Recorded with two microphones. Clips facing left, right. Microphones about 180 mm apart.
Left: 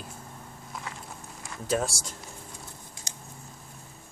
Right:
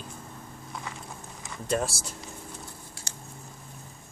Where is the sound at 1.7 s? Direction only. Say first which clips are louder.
Even; centre (ahead or behind).